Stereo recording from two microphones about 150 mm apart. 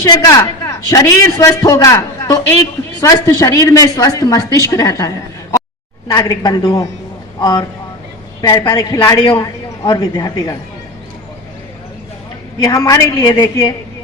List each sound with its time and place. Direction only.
0.0 s a man's voice: 25° left (ahead or behind)
8.4 s a man's voice: 25° left (ahead or behind)
12.6 s a man's voice: 25° left (ahead or behind)